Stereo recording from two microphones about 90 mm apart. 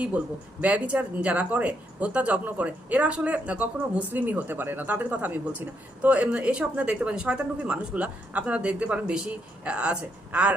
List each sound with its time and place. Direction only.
0.6 s speech: 15° right (ahead or behind)